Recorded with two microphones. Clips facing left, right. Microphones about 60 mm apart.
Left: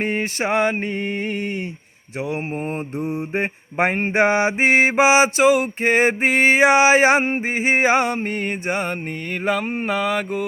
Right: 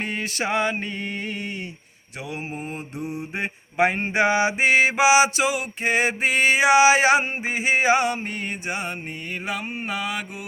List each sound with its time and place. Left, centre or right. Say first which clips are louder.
0.0 s mantra: left 5 dB; left
2.6 s mantra: left 6 dB; left
9.5 s a sound: left 8 dB; left